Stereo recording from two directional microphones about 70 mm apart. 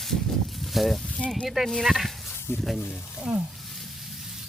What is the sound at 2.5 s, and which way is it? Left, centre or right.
Speech, left.